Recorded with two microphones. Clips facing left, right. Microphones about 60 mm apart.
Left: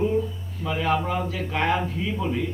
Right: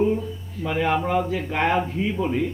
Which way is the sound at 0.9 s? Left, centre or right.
Right.